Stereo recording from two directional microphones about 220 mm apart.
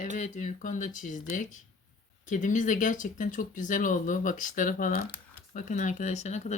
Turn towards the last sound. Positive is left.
turn(degrees=30)  # may be behind; listen again after turning